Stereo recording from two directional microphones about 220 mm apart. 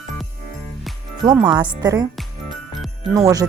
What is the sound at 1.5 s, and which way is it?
Speech, 20° right (ahead or behind).